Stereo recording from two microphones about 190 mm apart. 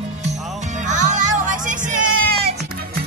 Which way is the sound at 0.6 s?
40° right (ahead or behind).